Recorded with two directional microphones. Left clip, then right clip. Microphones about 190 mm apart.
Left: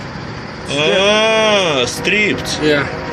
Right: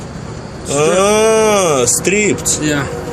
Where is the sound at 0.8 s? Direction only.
30° right (ahead or behind).